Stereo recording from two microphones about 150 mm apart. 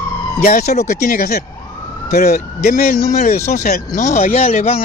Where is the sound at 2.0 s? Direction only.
60° left (ahead or behind).